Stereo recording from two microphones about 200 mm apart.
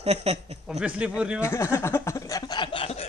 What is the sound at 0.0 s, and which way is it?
Speech, 30° right (ahead or behind).